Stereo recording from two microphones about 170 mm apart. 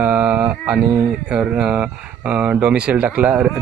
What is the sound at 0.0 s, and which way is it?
Speech, 5° right (ahead or behind).